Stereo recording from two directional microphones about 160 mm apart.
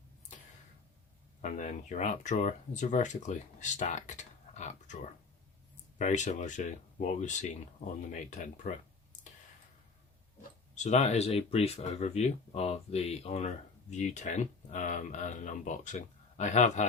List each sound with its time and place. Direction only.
1.4 s speech: 50° left (ahead or behind)
10.8 s speech: 45° left (ahead or behind)